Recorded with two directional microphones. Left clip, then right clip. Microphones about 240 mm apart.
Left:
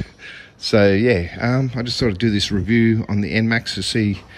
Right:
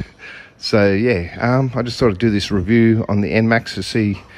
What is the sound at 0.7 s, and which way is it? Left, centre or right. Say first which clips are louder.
Speech: even; centre.